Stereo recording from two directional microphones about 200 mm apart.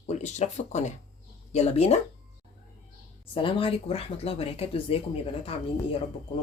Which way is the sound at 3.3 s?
25° left (ahead or behind).